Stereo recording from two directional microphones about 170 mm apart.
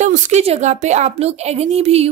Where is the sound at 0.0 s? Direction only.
45° right (ahead or behind).